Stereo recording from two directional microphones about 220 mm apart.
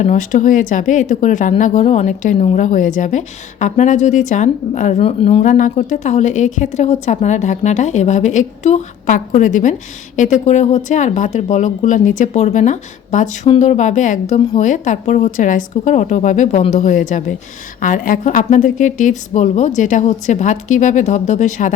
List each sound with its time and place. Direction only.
0.0 s speech: 35° left (ahead or behind)